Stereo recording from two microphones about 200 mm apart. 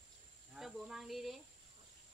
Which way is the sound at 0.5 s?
Centre (ahead or behind).